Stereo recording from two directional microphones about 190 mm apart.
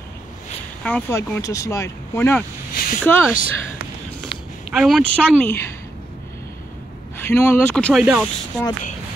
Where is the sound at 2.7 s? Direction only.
50° left (ahead or behind).